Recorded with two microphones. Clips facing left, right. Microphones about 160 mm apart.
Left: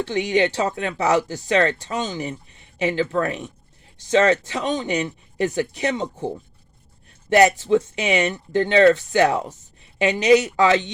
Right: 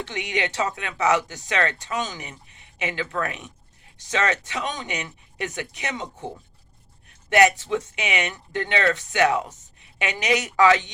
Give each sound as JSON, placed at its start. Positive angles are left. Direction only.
{"t": 0.0, "sound": "speech", "side_deg": 35}